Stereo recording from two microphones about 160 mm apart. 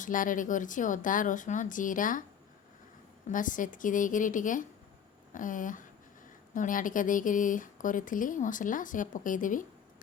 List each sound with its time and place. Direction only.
0.0 s speech: 55° left (ahead or behind)
3.2 s speech: 55° left (ahead or behind)